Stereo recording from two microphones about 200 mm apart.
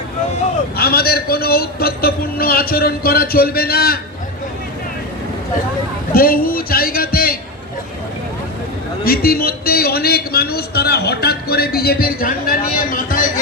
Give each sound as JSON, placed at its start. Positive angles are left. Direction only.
{"t": 0.8, "sound": "a man's voice", "side_deg": 50}
{"t": 6.1, "sound": "a man's voice", "side_deg": 45}
{"t": 9.0, "sound": "a man's voice", "side_deg": 50}